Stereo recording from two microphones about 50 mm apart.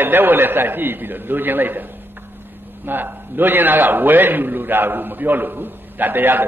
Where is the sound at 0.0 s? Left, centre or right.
Right.